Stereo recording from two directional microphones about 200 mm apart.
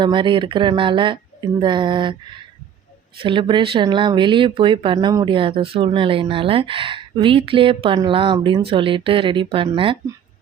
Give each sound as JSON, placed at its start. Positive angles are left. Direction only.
{"t": 0.0, "sound": "speech", "side_deg": -25}
{"t": 3.2, "sound": "speech", "side_deg": -25}